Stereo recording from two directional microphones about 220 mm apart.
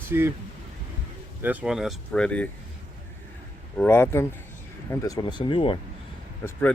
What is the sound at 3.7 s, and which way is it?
Speech, 10° left (ahead or behind).